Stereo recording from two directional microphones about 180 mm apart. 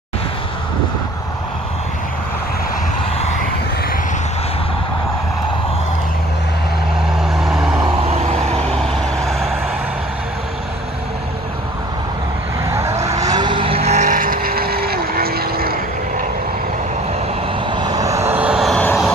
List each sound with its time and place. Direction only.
7.8 s vehicle: 35° right (ahead or behind)
8.7 s vehicle: centre (ahead or behind)
12.7 s vehicle: 15° right (ahead or behind); by 16.3 s 55° right (ahead or behind)
17.6 s vehicle: 25° right (ahead or behind); by 19.1 s 5° left (ahead or behind)